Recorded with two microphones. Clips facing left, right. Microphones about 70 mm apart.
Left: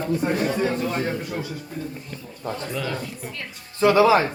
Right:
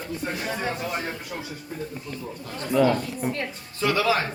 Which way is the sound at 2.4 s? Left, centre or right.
Left.